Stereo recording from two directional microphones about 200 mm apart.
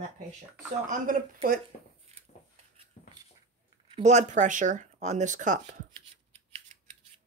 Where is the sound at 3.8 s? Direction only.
30° right (ahead or behind).